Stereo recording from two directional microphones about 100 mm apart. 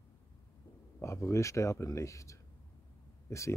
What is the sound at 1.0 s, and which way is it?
Speech, 30° left (ahead or behind).